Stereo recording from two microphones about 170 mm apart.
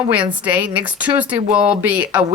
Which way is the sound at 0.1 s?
10° right (ahead or behind).